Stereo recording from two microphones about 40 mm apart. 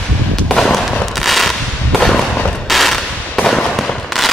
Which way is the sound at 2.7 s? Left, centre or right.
Centre.